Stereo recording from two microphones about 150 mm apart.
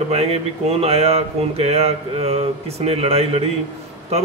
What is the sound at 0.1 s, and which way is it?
Speech, 45° right (ahead or behind).